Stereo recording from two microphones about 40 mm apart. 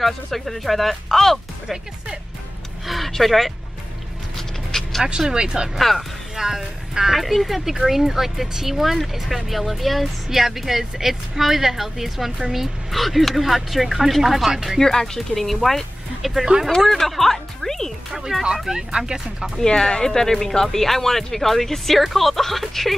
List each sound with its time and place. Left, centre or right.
0.0 s speech: centre
2.9 s speech: centre
4.4 s dog: centre
5.3 s speech: right
5.8 s speech: centre
6.3 s speech: centre
14.8 s speech: centre
18.7 s speech: centre
19.6 s speech: centre